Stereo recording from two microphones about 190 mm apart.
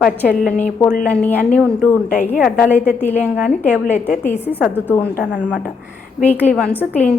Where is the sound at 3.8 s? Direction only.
40° left (ahead or behind).